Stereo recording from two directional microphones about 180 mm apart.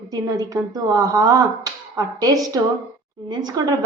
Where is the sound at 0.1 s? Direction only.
20° right (ahead or behind).